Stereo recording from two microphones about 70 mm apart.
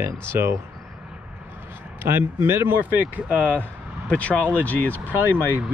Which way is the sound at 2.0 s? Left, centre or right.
Right.